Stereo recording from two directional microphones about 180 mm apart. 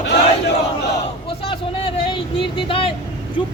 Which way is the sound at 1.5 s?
30° left (ahead or behind).